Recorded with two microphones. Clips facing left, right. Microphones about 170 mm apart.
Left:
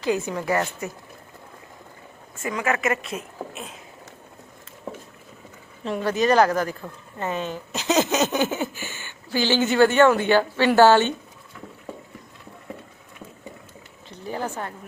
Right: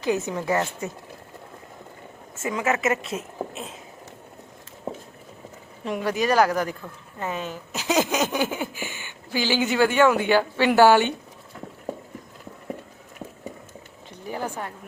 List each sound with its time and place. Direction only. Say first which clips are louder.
0.0 s a woman's voice: even; 20° right (ahead or behind)
2.3 s a woman's voice: right 1 dB; 20° right (ahead or behind)
5.8 s speech: left 2 dB; 10° right (ahead or behind)
14.3 s a sound: left 1 dB; 15° right (ahead or behind)